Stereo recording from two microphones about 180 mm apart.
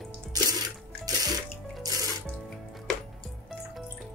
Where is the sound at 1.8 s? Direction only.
20° right (ahead or behind).